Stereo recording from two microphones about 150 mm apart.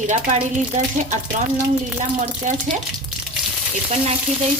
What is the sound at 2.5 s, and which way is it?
Speech, 55° right (ahead or behind).